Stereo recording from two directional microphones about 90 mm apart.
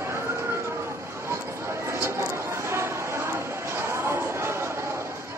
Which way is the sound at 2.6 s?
30° right (ahead or behind).